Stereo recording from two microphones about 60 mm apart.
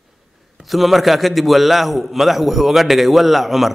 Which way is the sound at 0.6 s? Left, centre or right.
Centre.